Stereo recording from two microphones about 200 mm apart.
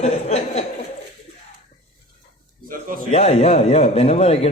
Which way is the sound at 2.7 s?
45° right (ahead or behind).